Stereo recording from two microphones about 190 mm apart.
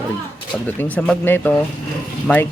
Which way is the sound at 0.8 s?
10° left (ahead or behind).